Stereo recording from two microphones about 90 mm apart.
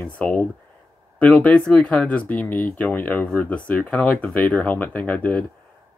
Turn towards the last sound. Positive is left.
turn(degrees=15)  # may be behind; listen again after turning